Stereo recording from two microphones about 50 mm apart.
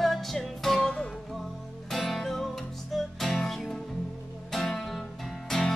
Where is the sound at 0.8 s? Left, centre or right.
Centre.